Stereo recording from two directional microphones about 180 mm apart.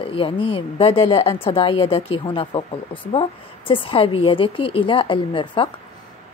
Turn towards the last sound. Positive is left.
turn(degrees=30)  # may be behind; listen again after turning